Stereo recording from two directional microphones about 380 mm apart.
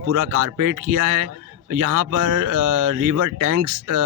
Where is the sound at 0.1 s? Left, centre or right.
Right.